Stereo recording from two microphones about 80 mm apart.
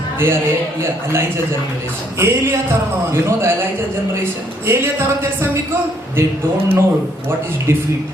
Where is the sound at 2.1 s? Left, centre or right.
Right.